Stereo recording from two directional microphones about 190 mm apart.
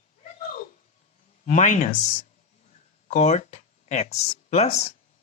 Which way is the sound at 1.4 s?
40° left (ahead or behind).